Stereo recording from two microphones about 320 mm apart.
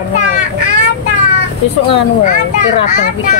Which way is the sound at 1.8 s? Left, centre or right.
Centre.